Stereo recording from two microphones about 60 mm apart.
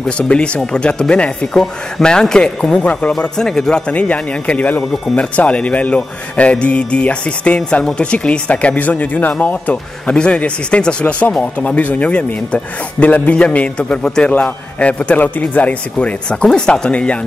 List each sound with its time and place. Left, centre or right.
0.2 s a man's voice: centre
1.5 s a man's voice: centre
3.9 s a man's voice: left